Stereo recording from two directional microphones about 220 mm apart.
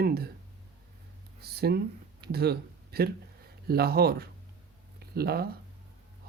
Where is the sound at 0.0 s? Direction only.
45° right (ahead or behind).